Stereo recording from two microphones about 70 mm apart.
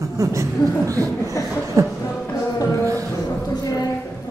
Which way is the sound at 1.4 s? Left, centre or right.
Left.